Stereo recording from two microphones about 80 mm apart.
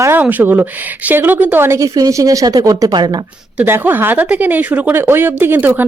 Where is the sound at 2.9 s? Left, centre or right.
Right.